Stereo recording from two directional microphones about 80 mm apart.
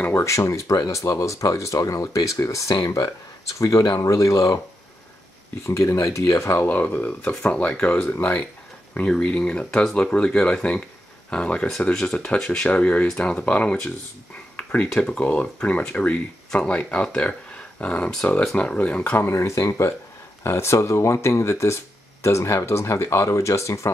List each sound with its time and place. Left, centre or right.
0.0 s speech: left
5.7 s speech: left
6.7 s speech: left
8.9 s speech: centre
14.6 s a sound: centre
15.0 s speech: centre
19.1 s speech: left